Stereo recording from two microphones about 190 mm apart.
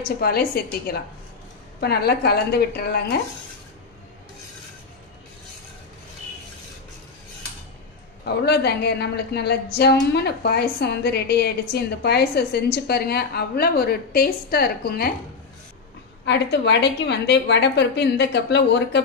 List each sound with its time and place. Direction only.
0.2 s a woman's voice: 55° left (ahead or behind)
8.5 s a woman's voice: 60° left (ahead or behind)
16.3 s a woman's voice: 65° left (ahead or behind)